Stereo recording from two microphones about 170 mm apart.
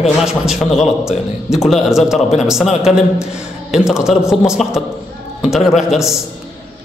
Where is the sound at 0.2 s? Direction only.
5° right (ahead or behind).